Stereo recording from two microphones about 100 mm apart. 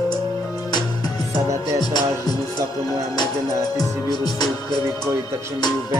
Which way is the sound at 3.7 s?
45° left (ahead or behind).